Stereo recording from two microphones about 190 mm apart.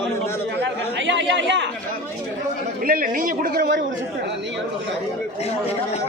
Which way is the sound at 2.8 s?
50° right (ahead or behind).